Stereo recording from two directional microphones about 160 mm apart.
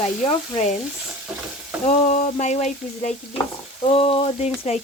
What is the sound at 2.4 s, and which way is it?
Speech, 45° left (ahead or behind).